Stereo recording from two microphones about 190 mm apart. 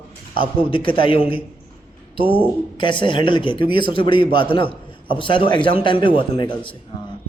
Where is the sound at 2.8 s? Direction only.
25° left (ahead or behind).